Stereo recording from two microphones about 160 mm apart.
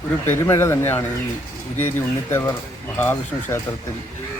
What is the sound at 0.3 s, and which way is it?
Speech, 15° left (ahead or behind).